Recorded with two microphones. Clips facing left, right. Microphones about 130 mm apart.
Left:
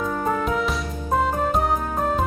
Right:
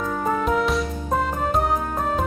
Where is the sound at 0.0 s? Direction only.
Centre (ahead or behind).